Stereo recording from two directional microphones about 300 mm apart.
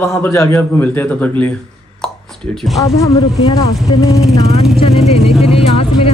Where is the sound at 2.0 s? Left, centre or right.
Centre.